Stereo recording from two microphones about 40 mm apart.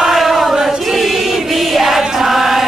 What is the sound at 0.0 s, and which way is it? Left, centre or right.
Chant, centre.